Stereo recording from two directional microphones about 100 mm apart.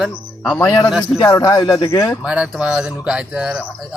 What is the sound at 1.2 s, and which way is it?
Speech, 40° left (ahead or behind).